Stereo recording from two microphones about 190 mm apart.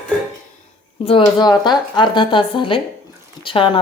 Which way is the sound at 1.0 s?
30° left (ahead or behind).